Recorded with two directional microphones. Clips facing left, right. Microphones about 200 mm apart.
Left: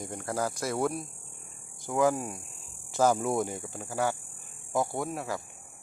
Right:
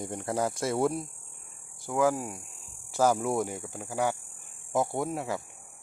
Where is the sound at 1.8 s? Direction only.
5° right (ahead or behind).